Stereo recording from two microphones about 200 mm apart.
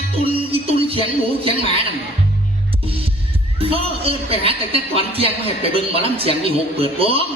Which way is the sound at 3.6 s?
30° right (ahead or behind).